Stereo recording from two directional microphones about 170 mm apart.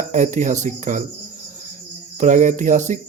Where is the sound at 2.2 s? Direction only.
45° right (ahead or behind).